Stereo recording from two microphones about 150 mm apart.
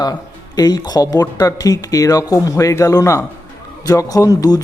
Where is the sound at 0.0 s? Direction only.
25° left (ahead or behind).